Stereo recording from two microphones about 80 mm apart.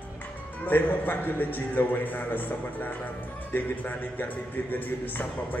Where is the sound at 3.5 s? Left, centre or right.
Left.